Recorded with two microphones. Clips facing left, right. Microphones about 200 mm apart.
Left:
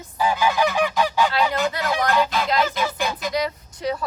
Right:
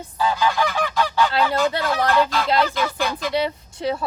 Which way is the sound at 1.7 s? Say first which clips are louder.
Right 2 dB; 30° right (ahead or behind).